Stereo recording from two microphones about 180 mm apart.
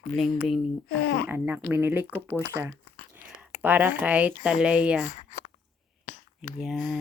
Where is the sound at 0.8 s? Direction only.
60° left (ahead or behind).